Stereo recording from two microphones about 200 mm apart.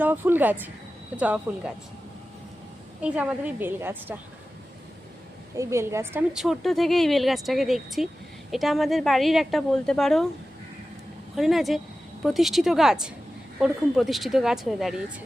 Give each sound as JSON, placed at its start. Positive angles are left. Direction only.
{"t": 0.0, "sound": "a woman's voice", "side_deg": -10}
{"t": 3.0, "sound": "a woman's voice", "side_deg": -5}
{"t": 5.5, "sound": "a woman's voice", "side_deg": -15}
{"t": 6.3, "sound": "speech", "side_deg": 0}
{"t": 11.3, "sound": "speech", "side_deg": 0}